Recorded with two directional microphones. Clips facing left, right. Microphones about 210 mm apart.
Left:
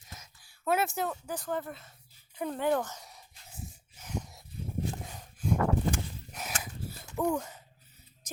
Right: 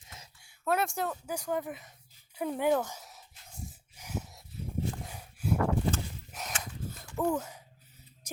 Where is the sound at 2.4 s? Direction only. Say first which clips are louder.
Right 1 dB; 10° right (ahead or behind).